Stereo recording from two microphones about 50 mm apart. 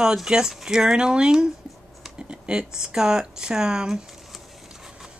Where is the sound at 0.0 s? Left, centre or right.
Centre.